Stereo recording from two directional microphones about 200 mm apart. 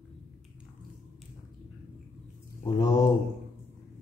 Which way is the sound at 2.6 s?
20° left (ahead or behind).